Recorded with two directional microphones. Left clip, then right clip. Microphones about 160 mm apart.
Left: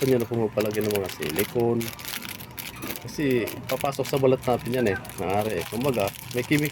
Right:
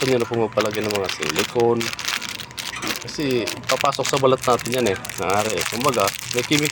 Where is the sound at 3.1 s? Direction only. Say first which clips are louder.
Right 1 dB; 25° left (ahead or behind).